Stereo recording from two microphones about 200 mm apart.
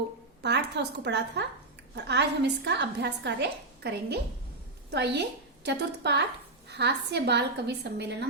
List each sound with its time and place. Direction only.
0.4 s a woman's voice: 60° right (ahead or behind)